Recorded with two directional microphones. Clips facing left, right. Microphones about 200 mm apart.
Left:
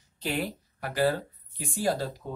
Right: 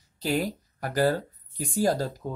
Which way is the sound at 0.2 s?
40° right (ahead or behind).